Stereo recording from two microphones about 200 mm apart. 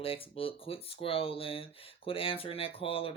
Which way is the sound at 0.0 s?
30° left (ahead or behind).